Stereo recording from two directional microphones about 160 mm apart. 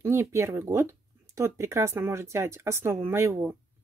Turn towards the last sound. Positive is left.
turn(degrees=-15)  # may be behind; listen again after turning